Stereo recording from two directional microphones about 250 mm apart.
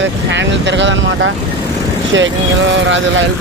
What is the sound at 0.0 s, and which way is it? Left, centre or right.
Speech, right.